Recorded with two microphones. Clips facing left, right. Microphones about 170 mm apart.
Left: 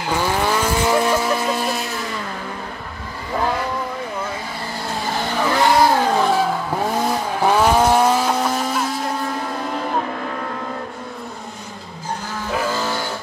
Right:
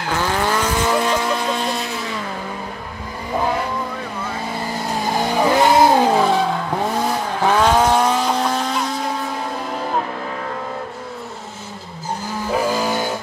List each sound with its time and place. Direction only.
0.0 s vehicle: 10° left (ahead or behind)
5.0 s vehicle: 15° right (ahead or behind)
6.1 s vehicle: centre (ahead or behind)
12.4 s vehicle: 15° right (ahead or behind)